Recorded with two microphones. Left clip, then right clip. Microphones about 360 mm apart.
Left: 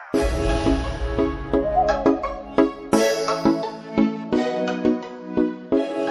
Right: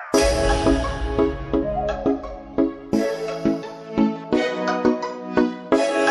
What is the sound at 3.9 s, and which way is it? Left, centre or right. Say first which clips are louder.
Music: right 2 dB; centre.